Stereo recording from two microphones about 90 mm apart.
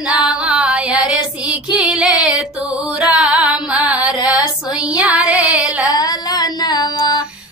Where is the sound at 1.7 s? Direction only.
10° right (ahead or behind).